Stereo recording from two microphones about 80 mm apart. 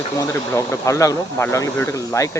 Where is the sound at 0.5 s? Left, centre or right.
Left.